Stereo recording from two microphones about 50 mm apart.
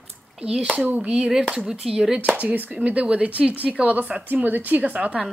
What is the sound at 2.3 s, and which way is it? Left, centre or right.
Speech, right.